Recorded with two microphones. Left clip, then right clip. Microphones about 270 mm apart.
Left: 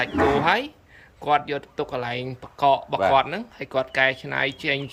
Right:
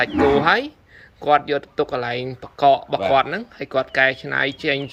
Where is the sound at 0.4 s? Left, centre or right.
Centre.